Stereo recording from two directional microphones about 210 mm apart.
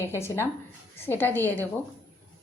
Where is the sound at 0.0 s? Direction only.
10° left (ahead or behind).